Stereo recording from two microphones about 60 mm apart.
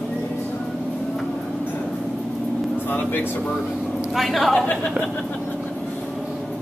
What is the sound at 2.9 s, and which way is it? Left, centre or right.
Speech, left.